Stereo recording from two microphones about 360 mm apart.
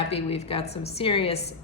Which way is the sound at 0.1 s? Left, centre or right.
Centre.